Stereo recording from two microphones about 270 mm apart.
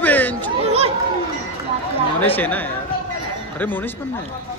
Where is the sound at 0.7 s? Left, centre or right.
Right.